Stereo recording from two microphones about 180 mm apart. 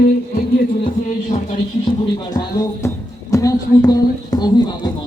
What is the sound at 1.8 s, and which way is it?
Speech, 25° left (ahead or behind).